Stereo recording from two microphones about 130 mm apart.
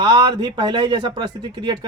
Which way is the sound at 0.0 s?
35° right (ahead or behind).